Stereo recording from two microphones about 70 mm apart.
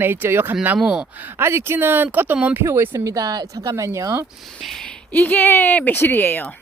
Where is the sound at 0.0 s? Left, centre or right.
Right.